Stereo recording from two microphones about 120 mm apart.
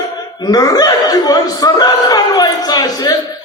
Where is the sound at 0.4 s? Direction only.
30° left (ahead or behind).